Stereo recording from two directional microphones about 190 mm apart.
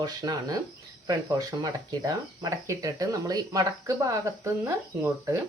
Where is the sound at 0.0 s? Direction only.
20° right (ahead or behind).